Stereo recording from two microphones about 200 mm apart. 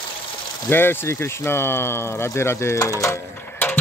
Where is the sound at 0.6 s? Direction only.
10° left (ahead or behind).